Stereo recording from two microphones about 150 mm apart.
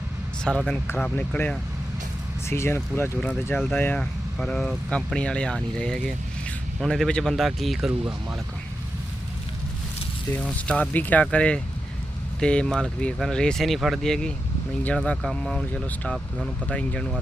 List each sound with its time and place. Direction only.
0.4 s speech: 5° left (ahead or behind)
10.3 s speech: 10° left (ahead or behind)